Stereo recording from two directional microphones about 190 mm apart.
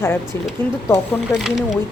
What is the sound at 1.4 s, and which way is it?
Speech, centre (ahead or behind).